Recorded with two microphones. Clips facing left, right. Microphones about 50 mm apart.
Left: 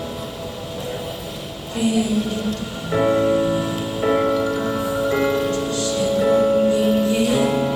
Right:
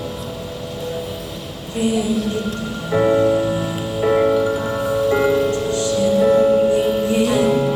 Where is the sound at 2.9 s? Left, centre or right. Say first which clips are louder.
Right 2 dB; centre.